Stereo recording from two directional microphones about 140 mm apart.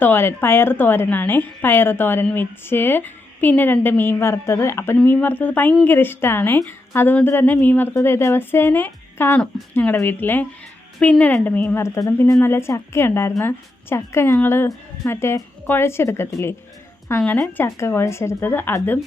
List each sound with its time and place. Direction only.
0.0 s a woman's voice: 15° left (ahead or behind)